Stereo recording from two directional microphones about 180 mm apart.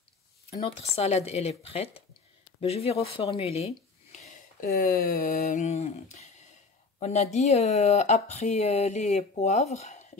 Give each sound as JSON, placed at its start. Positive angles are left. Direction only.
{"t": 0.5, "sound": "speech", "side_deg": 35}
{"t": 4.6, "sound": "a sound", "side_deg": 55}
{"t": 7.0, "sound": "speech", "side_deg": 40}